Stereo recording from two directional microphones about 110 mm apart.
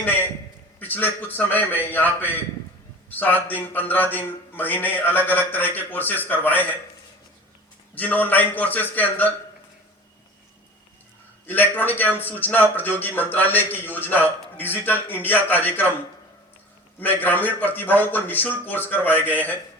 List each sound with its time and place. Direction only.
0.8 s a man's voice: 15° left (ahead or behind)
7.9 s a man's voice: 15° left (ahead or behind)
11.4 s a man's voice: 15° left (ahead or behind)
17.0 s a man's voice: 15° left (ahead or behind)